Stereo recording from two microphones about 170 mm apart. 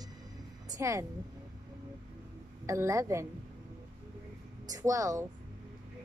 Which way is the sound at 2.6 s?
20° right (ahead or behind).